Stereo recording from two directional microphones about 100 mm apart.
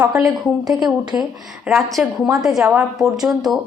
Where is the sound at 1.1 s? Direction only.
20° right (ahead or behind).